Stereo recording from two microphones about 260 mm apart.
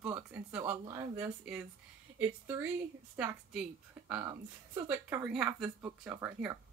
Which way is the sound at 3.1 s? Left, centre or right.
Centre.